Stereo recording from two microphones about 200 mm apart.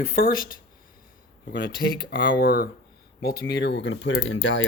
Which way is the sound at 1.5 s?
60° left (ahead or behind).